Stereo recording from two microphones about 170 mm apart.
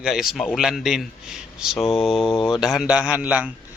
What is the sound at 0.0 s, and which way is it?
Speech, centre (ahead or behind).